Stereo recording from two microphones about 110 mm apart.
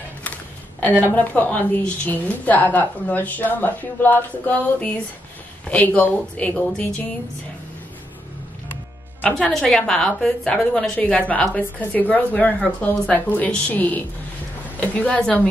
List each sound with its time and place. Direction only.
0.7 s a woman's voice: 15° left (ahead or behind)
9.4 s a woman's voice: centre (ahead or behind)